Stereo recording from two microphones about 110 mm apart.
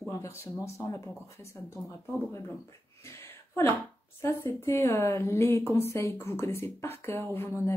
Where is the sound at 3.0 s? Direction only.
25° left (ahead or behind).